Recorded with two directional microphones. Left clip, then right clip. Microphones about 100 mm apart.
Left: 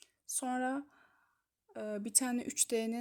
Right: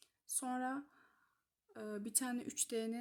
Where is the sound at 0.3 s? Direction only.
25° left (ahead or behind).